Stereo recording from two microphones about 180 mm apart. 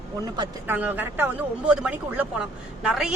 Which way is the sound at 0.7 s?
10° right (ahead or behind).